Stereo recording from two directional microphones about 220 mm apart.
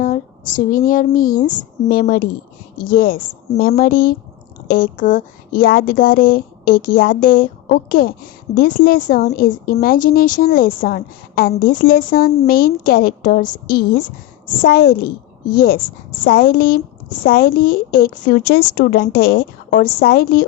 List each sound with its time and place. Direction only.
0.0 s speech: 35° left (ahead or behind)